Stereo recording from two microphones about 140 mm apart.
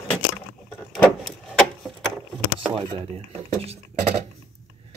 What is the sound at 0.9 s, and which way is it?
Vehicle, 5° left (ahead or behind).